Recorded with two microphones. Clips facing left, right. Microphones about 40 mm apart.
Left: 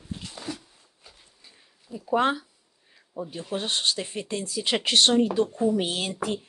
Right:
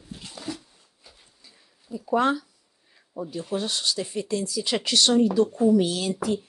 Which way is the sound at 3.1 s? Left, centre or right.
Left.